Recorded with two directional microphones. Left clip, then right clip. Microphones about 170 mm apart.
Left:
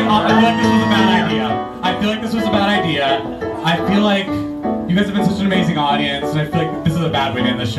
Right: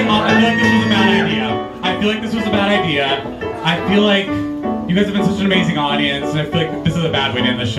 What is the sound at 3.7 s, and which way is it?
Speech, 20° left (ahead or behind).